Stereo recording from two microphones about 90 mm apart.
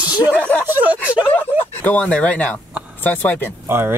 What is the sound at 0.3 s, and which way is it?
Speech, 15° left (ahead or behind).